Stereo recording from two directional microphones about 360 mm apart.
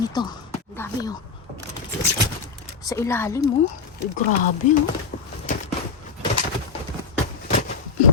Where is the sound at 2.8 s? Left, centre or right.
Centre.